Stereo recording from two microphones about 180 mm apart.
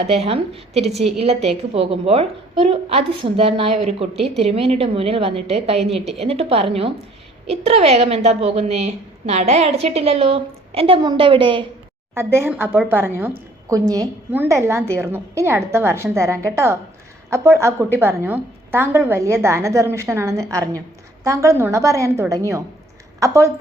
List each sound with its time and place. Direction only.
0.0 s a woman's voice: 35° right (ahead or behind)
12.1 s a woman's voice: 15° right (ahead or behind)